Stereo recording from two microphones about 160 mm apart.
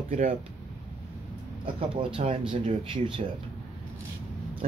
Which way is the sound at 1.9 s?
35° right (ahead or behind).